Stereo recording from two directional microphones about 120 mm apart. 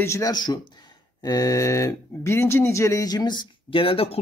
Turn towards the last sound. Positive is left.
turn(degrees=50)  # may be behind; listen again after turning